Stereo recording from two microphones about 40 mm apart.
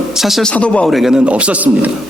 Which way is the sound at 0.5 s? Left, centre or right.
Left.